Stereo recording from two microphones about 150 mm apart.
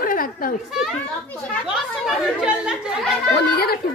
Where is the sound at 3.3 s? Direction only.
90° left.